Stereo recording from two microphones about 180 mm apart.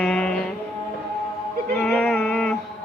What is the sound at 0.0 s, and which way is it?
Music, 5° left (ahead or behind).